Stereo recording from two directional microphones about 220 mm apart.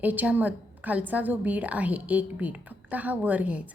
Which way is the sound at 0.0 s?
5° right (ahead or behind).